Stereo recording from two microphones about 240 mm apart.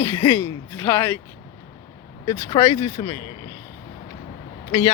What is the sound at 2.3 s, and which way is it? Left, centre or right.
Speech, centre.